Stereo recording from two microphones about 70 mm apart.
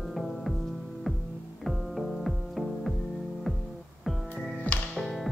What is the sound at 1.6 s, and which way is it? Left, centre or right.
Music, centre.